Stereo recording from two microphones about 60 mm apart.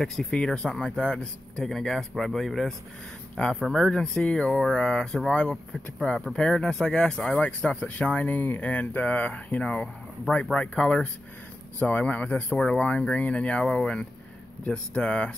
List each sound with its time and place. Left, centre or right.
0.0 s speech: centre
4.5 s speech: centre
11.8 s speech: left